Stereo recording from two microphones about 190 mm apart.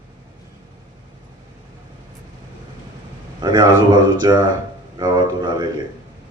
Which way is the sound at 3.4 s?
20° right (ahead or behind).